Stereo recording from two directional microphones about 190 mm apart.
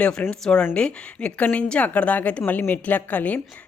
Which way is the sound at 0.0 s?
5° left (ahead or behind).